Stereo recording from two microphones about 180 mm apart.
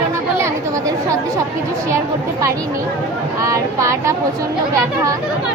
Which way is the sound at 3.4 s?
15° right (ahead or behind).